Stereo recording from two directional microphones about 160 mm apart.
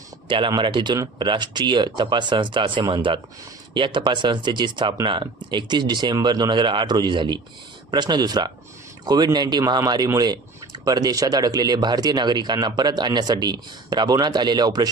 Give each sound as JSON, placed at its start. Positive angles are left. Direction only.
{"t": 0.3, "sound": "speech", "side_deg": -30}